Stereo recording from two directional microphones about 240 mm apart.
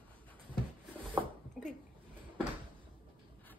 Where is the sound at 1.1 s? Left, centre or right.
Centre.